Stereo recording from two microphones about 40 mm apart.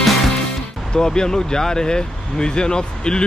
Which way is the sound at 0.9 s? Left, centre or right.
Centre.